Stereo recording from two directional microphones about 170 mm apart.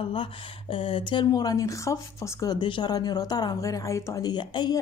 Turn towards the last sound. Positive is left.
turn(degrees=25)  # may be behind; listen again after turning